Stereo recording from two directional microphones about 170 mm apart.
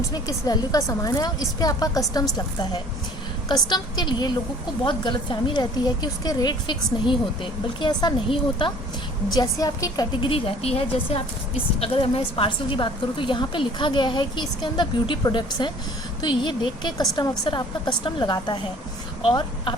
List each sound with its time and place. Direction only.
0.1 s a woman's voice: 25° left (ahead or behind)
3.5 s a woman's voice: 25° left (ahead or behind)